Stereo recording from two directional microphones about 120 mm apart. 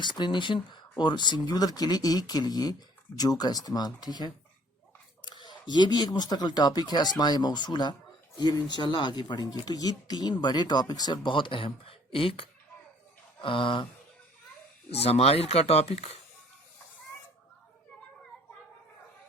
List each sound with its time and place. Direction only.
0.0 s speech: 40° left (ahead or behind)
13.4 s a sound: 45° left (ahead or behind)
14.8 s speech: 60° left (ahead or behind)